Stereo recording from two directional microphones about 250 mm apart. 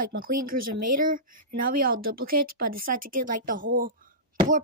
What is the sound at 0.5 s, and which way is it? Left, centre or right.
Speech, right.